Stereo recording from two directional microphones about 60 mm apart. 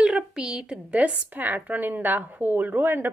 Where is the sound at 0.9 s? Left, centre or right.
Right.